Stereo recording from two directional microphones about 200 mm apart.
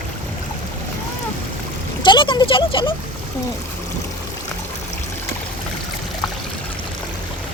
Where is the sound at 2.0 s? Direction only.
25° left (ahead or behind).